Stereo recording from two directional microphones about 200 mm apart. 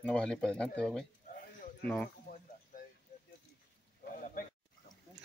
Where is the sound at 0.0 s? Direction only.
5° left (ahead or behind).